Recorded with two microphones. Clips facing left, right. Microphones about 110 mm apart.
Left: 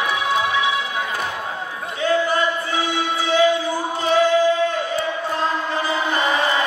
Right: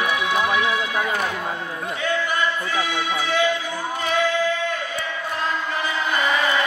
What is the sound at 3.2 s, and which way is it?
Music, 30° left (ahead or behind).